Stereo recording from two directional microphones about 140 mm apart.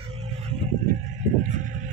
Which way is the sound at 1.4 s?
60° right (ahead or behind).